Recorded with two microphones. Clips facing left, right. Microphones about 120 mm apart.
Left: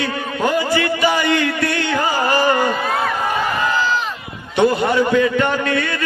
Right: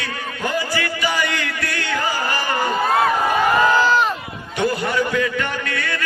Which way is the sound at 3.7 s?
45° right (ahead or behind).